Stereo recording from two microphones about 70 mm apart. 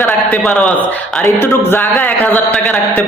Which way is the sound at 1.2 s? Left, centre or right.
Left.